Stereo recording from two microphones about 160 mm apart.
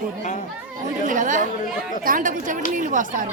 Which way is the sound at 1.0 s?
55° right (ahead or behind).